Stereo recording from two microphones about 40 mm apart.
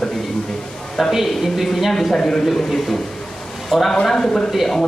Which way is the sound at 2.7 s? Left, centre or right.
Centre.